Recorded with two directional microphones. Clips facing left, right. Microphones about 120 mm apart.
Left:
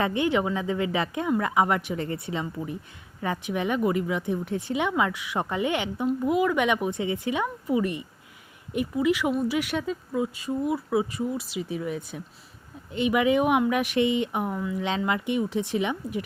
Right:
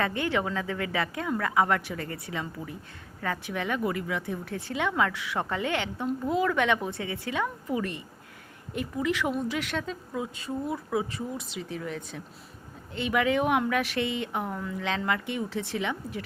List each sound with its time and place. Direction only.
0.0 s speech: 20° left (ahead or behind)